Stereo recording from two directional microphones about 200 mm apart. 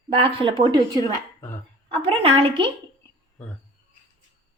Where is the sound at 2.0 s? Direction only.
30° right (ahead or behind).